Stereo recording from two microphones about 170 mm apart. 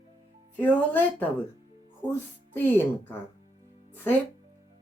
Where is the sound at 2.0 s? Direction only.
20° right (ahead or behind).